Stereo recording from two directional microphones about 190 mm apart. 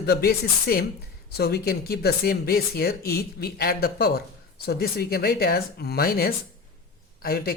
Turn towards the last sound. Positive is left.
turn(degrees=50)  # may be behind; listen again after turning